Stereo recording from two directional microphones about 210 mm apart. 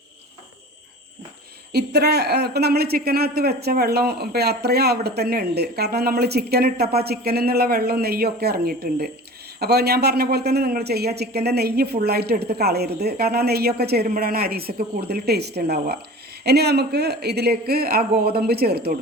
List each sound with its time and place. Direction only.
1.7 s speech: 50° right (ahead or behind)